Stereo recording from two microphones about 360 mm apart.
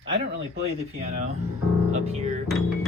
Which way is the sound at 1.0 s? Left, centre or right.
Centre.